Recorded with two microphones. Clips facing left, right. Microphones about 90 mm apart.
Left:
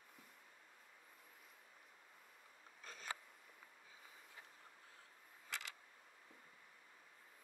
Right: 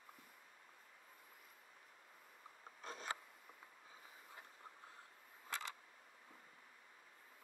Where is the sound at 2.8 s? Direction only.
35° right (ahead or behind).